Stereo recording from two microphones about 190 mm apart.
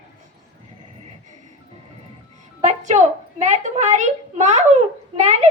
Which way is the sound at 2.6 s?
35° right (ahead or behind).